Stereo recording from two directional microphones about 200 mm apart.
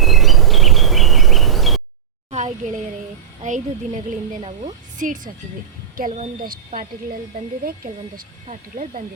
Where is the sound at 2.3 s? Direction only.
40° right (ahead or behind).